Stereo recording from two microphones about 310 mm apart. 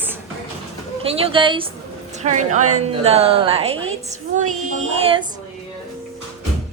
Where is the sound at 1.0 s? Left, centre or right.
Centre.